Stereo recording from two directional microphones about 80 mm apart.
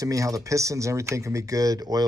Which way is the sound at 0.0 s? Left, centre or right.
Right.